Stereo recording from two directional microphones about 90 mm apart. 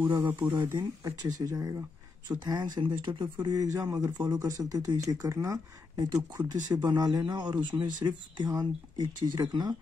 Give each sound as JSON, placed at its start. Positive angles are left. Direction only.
{"t": 0.2, "sound": "speech", "side_deg": -20}
{"t": 0.7, "sound": "speech", "side_deg": -45}
{"t": 2.2, "sound": "speech", "side_deg": -50}
{"t": 3.1, "sound": "speech", "side_deg": -65}
{"t": 3.4, "sound": "speech", "side_deg": -40}
{"t": 6.5, "sound": "speech", "side_deg": -50}